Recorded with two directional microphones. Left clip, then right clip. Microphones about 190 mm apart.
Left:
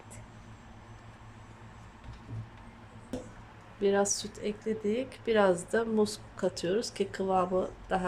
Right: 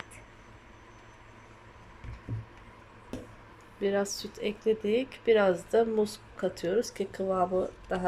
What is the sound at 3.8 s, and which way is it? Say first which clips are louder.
Speech: left 2 dB; 10° left (ahead or behind).